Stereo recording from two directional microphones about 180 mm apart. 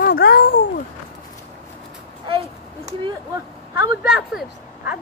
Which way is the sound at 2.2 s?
30° right (ahead or behind).